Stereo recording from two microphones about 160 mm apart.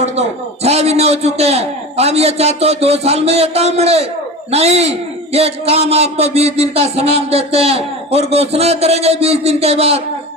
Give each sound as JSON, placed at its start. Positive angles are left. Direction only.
{"t": 0.0, "sound": "a man's voice", "side_deg": -40}